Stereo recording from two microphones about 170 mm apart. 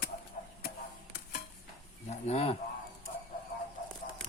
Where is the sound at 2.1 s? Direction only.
40° left (ahead or behind).